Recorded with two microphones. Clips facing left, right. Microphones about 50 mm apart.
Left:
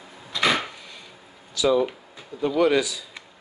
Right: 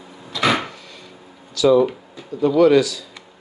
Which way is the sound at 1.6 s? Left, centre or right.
Centre.